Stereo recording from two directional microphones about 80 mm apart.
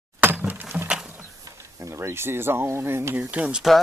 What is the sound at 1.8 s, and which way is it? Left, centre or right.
Speech, right.